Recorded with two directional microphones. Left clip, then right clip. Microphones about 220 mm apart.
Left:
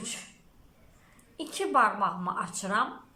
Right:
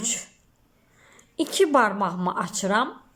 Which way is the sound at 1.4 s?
35° right (ahead or behind).